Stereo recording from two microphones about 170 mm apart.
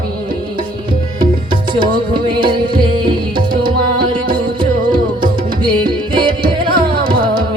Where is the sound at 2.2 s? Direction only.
30° right (ahead or behind).